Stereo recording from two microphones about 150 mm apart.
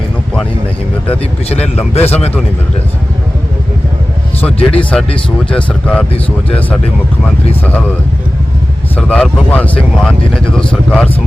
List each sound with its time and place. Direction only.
1.5 s speech: 45° left (ahead or behind)
4.8 s speech: 10° left (ahead or behind)
9.0 s speech: 5° left (ahead or behind)